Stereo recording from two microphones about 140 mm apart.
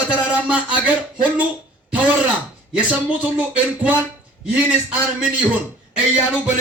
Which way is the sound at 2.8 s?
10° right (ahead or behind).